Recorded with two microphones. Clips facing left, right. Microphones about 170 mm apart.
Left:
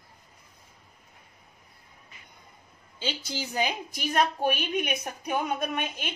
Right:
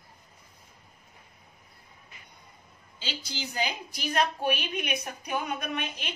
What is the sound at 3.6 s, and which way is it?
A woman's voice, 50° left (ahead or behind).